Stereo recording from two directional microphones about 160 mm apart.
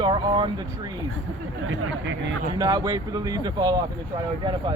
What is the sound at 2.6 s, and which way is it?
Speech, 25° right (ahead or behind).